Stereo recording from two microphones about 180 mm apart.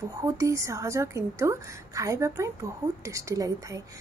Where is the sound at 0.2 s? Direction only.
20° right (ahead or behind).